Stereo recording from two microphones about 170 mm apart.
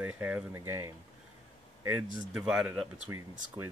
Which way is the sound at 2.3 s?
5° right (ahead or behind).